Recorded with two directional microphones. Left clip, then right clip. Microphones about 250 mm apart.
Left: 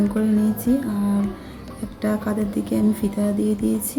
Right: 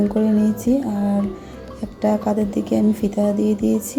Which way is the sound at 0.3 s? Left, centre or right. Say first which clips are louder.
Right 2 dB; centre.